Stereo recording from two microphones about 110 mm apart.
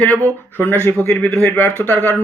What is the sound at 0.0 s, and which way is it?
Speech, 10° left (ahead or behind).